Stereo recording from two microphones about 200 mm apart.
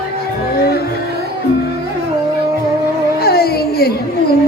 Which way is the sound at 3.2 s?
50° left (ahead or behind).